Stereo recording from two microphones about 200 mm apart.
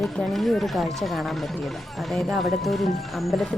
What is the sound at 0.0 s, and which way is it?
Speech, centre (ahead or behind).